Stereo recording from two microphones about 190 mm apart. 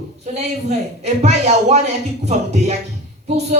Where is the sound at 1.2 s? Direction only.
35° right (ahead or behind).